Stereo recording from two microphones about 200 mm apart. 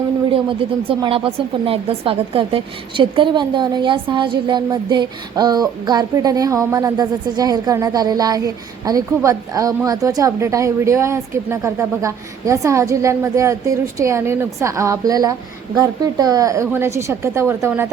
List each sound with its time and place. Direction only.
0.3 s speech: 25° right (ahead or behind)